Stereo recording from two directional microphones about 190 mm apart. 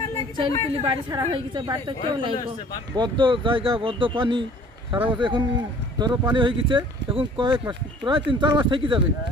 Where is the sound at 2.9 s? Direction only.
25° right (ahead or behind).